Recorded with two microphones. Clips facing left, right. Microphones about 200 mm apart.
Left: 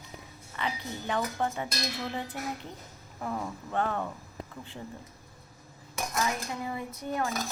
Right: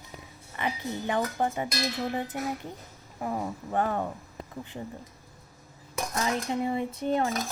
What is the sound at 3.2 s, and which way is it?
Speech, 20° right (ahead or behind).